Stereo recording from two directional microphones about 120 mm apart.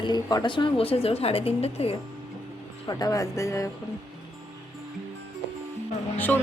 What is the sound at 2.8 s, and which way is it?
Speech, 35° left (ahead or behind).